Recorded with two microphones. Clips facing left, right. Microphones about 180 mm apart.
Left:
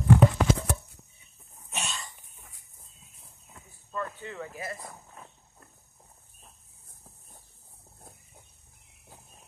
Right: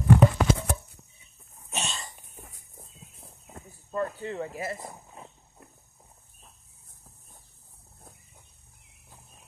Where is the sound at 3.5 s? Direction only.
40° right (ahead or behind); by 4.9 s 25° right (ahead or behind).